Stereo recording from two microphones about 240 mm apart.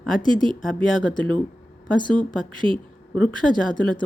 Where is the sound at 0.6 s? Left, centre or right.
Centre.